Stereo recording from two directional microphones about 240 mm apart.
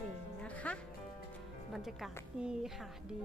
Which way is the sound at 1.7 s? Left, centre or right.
Centre.